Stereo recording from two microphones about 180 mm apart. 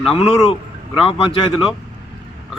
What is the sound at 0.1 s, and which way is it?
A man's voice, 30° left (ahead or behind).